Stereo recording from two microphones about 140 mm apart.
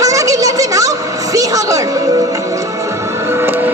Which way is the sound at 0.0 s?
25° right (ahead or behind).